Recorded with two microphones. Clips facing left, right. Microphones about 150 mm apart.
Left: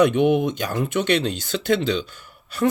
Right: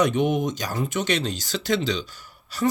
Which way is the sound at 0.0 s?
60° left (ahead or behind).